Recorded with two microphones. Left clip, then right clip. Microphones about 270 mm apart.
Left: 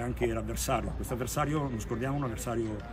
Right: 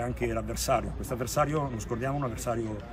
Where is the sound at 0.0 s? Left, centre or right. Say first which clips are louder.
Right 1 dB; centre.